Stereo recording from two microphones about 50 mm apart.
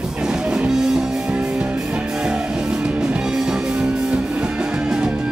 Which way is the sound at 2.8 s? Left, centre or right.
Right.